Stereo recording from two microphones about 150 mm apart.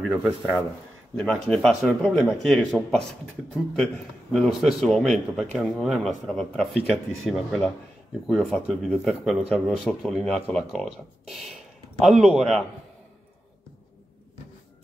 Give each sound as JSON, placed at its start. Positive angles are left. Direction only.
{"t": 0.0, "sound": "a man's voice", "side_deg": 0}